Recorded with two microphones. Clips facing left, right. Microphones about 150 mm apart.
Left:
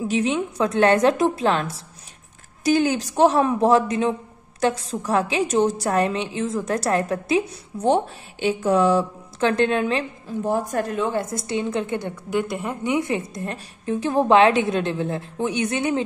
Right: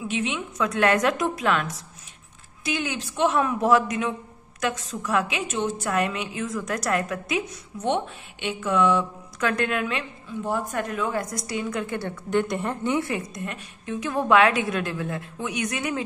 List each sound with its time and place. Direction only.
0.0 s a woman's voice: 40° left (ahead or behind)
12.3 s a woman's voice: 5° left (ahead or behind)
12.8 s a woman's voice: 15° left (ahead or behind)
13.3 s a woman's voice: 35° left (ahead or behind)